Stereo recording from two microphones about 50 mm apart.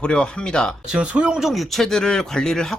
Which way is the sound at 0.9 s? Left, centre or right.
Right.